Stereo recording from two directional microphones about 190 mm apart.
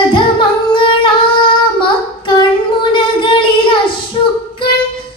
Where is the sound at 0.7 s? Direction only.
25° left (ahead or behind).